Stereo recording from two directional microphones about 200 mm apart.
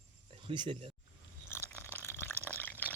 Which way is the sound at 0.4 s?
25° right (ahead or behind).